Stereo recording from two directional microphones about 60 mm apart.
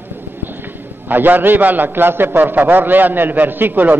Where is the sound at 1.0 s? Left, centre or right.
Right.